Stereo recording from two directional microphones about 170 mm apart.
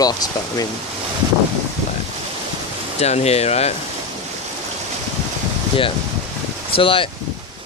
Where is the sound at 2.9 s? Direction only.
40° left (ahead or behind).